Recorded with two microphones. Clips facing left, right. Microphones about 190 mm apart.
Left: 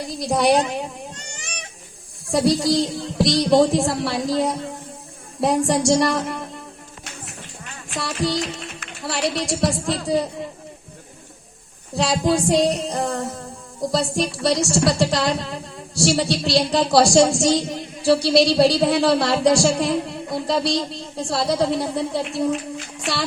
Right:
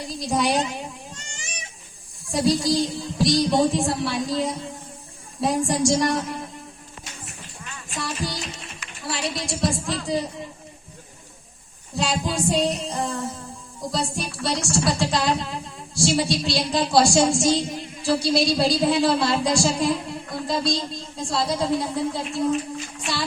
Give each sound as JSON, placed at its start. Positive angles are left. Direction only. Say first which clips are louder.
{"t": 0.2, "sound": "a woman's voice", "louder": "left 5 dB", "side_deg": 65}
{"t": 2.3, "sound": "a woman's voice", "louder": "left 3 dB", "side_deg": 65}
{"t": 7.9, "sound": "music", "louder": "left 6 dB", "side_deg": 70}
{"t": 11.9, "sound": "speech", "louder": "left 5 dB", "side_deg": 65}
{"t": 21.2, "sound": "speech", "louder": "left 4 dB", "side_deg": 70}